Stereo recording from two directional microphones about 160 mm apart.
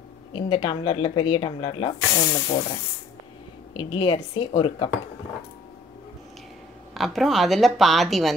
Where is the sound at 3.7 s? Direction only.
30° left (ahead or behind).